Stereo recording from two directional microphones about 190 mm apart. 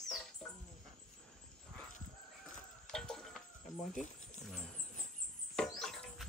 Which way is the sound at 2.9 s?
5° left (ahead or behind).